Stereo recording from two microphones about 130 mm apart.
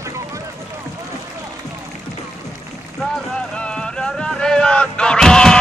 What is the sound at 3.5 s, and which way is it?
Artillery fire, 5° left (ahead or behind).